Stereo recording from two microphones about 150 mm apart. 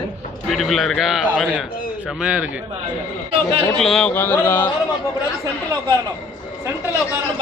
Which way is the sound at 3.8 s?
5° left (ahead or behind).